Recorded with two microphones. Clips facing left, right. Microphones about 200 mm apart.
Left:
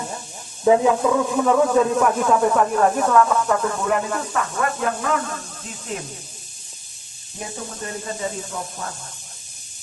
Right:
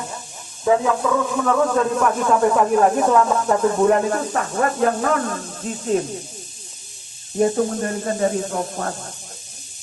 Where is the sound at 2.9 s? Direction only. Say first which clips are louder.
Right 1 dB; 20° right (ahead or behind); by 6.0 s 40° right (ahead or behind).